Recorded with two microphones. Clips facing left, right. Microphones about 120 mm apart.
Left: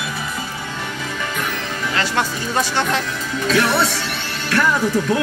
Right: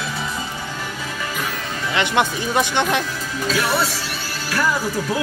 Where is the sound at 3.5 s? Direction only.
Centre (ahead or behind).